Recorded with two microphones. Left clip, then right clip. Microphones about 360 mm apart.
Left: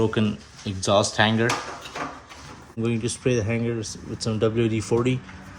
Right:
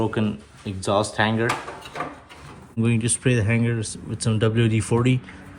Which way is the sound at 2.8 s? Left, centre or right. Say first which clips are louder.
Right 1 dB; right.